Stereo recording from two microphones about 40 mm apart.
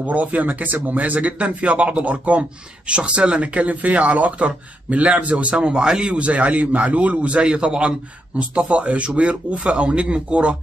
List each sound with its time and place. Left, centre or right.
0.0 s speech: right
8.4 s speech: right